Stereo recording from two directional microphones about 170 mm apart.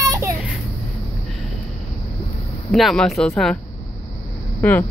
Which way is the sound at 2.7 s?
Centre (ahead or behind).